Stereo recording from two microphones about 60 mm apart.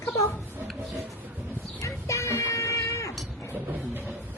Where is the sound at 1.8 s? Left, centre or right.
Left.